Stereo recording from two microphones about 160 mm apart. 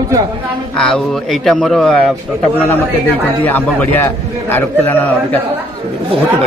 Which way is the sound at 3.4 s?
10° left (ahead or behind).